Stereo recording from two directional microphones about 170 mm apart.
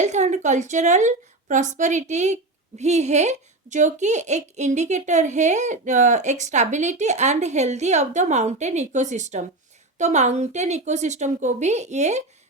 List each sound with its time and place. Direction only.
0.0 s a woman's voice: 45° right (ahead or behind)